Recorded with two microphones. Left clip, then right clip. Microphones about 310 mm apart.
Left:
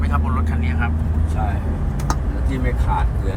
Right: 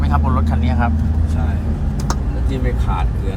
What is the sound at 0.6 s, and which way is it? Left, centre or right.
Vehicle, centre.